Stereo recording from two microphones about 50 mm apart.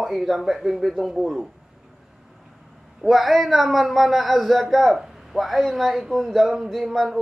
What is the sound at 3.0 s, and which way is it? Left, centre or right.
A man's voice, centre.